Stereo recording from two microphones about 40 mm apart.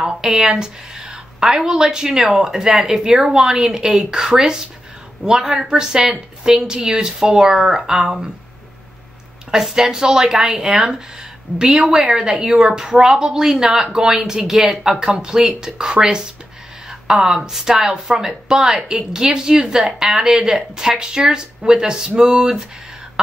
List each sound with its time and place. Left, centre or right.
0.0 s speech: right
5.6 s speech: centre
9.5 s speech: centre
19.8 s speech: centre